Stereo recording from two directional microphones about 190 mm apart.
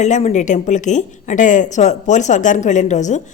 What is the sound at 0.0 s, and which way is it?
Speech, 35° left (ahead or behind).